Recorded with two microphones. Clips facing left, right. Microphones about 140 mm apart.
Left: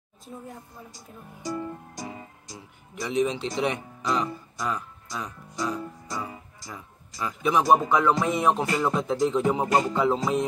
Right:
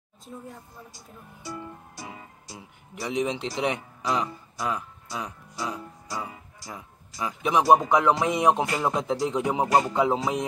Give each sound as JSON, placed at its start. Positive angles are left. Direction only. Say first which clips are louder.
{"t": 1.5, "sound": "music", "louder": "left 6 dB", "side_deg": 40}
{"t": 3.0, "sound": "a man's voice", "louder": "left 2 dB", "side_deg": -15}
{"t": 8.8, "sound": "music", "louder": "left 3 dB", "side_deg": -15}